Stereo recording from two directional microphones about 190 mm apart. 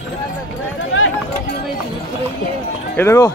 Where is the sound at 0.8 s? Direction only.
90° left.